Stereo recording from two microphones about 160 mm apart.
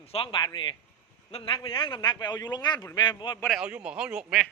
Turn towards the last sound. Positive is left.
turn(degrees=-5)  # may be behind; listen again after turning